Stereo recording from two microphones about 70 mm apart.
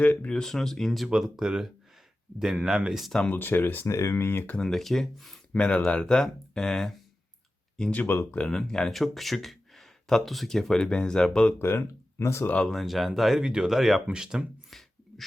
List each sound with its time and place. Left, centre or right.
0.0 s speech: left
0.3 s speech: centre
3.2 s speech: left
3.8 s speech: left
4.1 s speech: left
4.5 s speech: centre
5.5 s speech: centre
8.0 s speech: left
8.3 s speech: centre
11.6 s speech: left
12.2 s speech: left
12.6 s speech: centre